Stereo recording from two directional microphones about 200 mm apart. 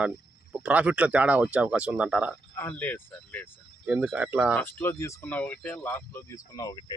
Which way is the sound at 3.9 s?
5° right (ahead or behind).